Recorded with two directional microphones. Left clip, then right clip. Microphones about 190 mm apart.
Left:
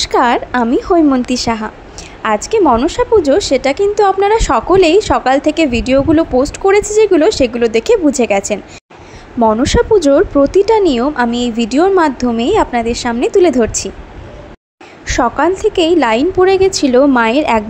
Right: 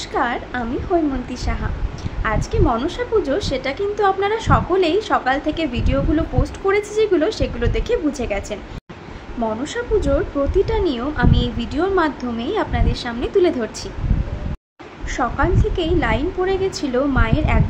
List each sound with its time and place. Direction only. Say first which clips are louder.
0.0 s a woman's voice: left 10 dB; 50° left (ahead or behind)
15.0 s a woman's voice: left 8 dB; 45° left (ahead or behind)